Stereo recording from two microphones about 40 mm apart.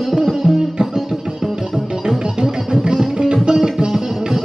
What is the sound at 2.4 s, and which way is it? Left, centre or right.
Music, centre.